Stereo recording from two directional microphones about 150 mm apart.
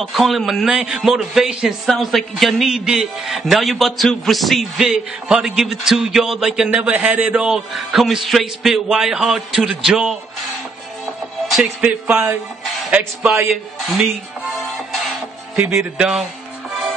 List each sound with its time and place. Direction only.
0.0 s a man's voice: centre (ahead or behind)
11.5 s speech: 5° right (ahead or behind)
15.5 s speech: 15° right (ahead or behind)